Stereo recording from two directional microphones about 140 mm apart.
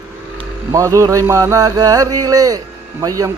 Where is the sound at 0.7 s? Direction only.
20° right (ahead or behind).